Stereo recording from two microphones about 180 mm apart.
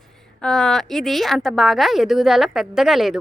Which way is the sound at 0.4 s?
5° left (ahead or behind).